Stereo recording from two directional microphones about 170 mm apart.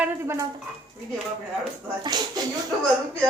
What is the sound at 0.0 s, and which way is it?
Speech, 15° right (ahead or behind).